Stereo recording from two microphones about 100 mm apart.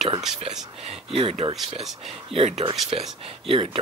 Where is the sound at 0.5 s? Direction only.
70° right (ahead or behind).